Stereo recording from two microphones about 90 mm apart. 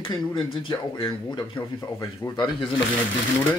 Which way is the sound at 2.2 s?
35° left (ahead or behind).